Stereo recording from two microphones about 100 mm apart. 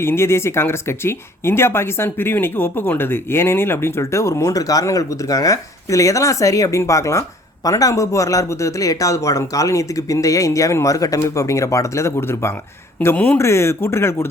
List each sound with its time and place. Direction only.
0.0 s speech: 25° left (ahead or behind)